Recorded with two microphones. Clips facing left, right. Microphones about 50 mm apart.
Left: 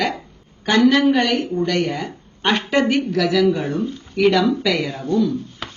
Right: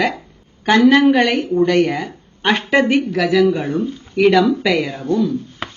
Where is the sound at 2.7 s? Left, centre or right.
Centre.